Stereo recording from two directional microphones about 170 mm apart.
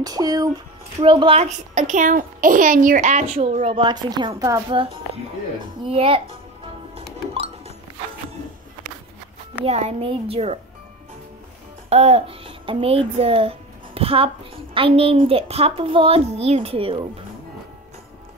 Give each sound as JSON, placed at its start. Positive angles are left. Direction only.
{"t": 0.0, "sound": "a child's voice", "side_deg": -20}
{"t": 4.7, "sound": "a child's voice", "side_deg": -30}
{"t": 7.0, "sound": "music", "side_deg": -35}
{"t": 9.7, "sound": "a child's voice", "side_deg": -40}
{"t": 11.9, "sound": "a child's voice", "side_deg": -40}